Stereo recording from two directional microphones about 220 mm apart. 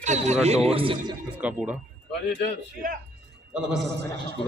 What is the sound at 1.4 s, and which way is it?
Speech, 5° right (ahead or behind).